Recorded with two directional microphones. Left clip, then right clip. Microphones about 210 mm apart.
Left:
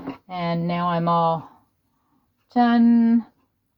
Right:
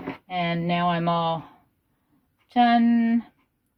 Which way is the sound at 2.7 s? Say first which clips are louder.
Left 2 dB; 40° left (ahead or behind).